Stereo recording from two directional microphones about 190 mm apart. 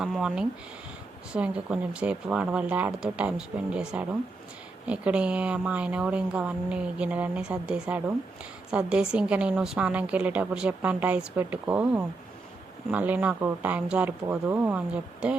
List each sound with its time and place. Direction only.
0.0 s a woman's voice: centre (ahead or behind)